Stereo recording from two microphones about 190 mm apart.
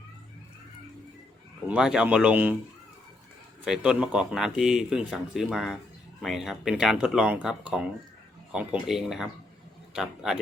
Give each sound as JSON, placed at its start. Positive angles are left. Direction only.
{"t": 1.6, "sound": "speech", "side_deg": -5}
{"t": 3.6, "sound": "speech", "side_deg": -5}